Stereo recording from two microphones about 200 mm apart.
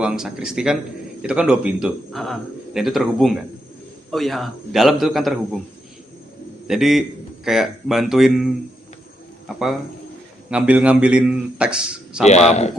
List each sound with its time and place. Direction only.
0.0 s speech: 5° right (ahead or behind)
6.7 s speech: centre (ahead or behind)
10.5 s speech: 5° right (ahead or behind)
12.2 s speech: 35° left (ahead or behind)